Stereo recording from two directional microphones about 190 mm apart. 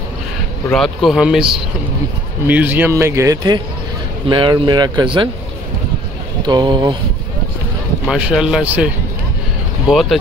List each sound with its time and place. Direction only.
0.7 s speech: centre (ahead or behind)
2.4 s a man's voice: 10° right (ahead or behind); by 5.3 s 25° right (ahead or behind)
6.4 s speech: 25° right (ahead or behind)
8.1 s speech: centre (ahead or behind)